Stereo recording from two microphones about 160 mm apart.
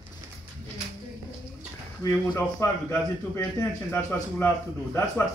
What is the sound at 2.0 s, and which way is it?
A man's voice, 20° left (ahead or behind).